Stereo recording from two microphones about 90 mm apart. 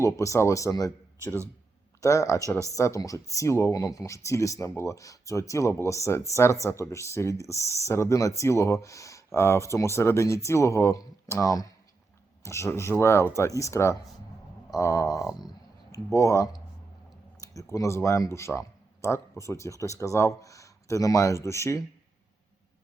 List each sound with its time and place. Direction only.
0.0 s speech: 35° left (ahead or behind)
2.0 s speech: 35° left (ahead or behind)